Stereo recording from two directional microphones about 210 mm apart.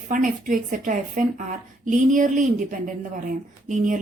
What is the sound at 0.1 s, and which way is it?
A woman's voice, 40° right (ahead or behind).